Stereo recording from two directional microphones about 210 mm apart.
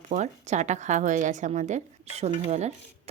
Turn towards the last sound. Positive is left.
turn(degrees=-30)  # may be behind; listen again after turning